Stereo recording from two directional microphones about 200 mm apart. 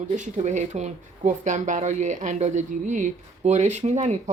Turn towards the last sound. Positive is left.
turn(degrees=-35)  # may be behind; listen again after turning